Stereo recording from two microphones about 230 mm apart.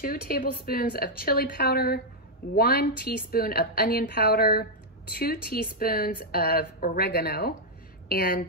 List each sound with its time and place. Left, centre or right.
0.0 s a woman's voice: left